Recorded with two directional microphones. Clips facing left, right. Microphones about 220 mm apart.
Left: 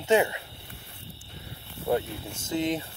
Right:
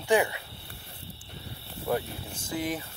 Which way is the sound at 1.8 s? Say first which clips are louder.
Left 3 dB; 25° left (ahead or behind).